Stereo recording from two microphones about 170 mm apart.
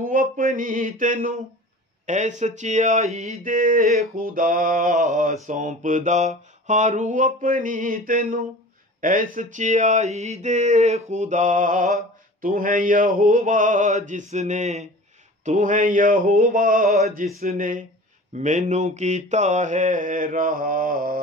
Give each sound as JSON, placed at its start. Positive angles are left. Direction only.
{"t": 0.0, "sound": "mantra", "side_deg": -55}